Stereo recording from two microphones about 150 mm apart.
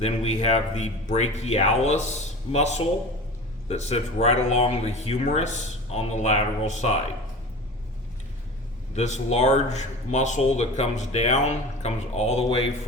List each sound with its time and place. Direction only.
0.0 s speech: 45° left (ahead or behind)
9.0 s speech: 50° left (ahead or behind)